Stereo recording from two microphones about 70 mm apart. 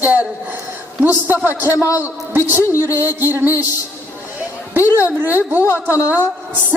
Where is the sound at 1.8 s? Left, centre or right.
Left.